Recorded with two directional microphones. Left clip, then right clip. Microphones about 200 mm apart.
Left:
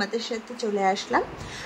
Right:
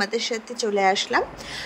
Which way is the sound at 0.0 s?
30° right (ahead or behind).